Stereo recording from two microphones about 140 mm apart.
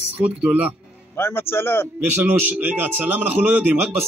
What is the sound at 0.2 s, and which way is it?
Speech, 10° right (ahead or behind).